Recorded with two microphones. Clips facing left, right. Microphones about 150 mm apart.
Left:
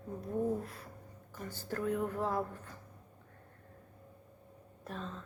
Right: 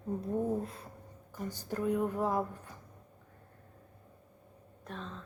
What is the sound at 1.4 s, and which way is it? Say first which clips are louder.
A woman's voice: right 2 dB; 15° right (ahead or behind).